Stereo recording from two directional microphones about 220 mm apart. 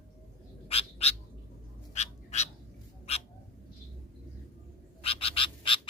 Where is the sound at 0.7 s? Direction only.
25° left (ahead or behind).